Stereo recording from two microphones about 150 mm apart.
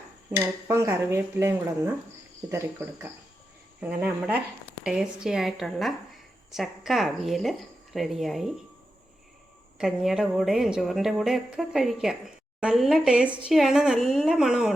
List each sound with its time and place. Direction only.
0.3 s speech: 20° right (ahead or behind); by 8.5 s centre (ahead or behind)
9.7 s speech: centre (ahead or behind)